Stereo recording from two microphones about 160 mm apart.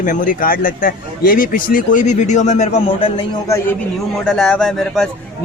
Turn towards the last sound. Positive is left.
turn(degrees=0)  # may be behind; listen again after turning